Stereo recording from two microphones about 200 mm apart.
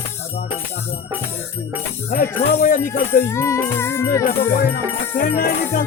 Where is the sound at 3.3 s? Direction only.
15° left (ahead or behind).